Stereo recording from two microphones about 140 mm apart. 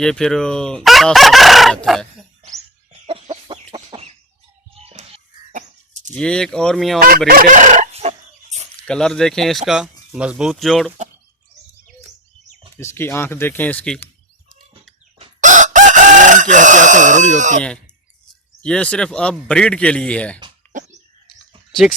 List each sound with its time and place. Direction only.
0.0 s speech: 5° left (ahead or behind)
3.1 s chicken: 35° right (ahead or behind)
4.7 s music: 45° right (ahead or behind)
5.5 s a sound: 60° right (ahead or behind)
6.1 s speech: 5° left (ahead or behind)
7.3 s chicken: 80° right; by 8.6 s 50° right (ahead or behind)
8.7 s speech: 5° left (ahead or behind)
12.7 s speech: 20° left (ahead or behind)
15.4 s chicken: 65° right (ahead or behind)
18.6 s speech: 5° left (ahead or behind)